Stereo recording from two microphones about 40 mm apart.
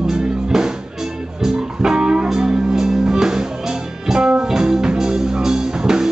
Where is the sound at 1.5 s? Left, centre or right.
Centre.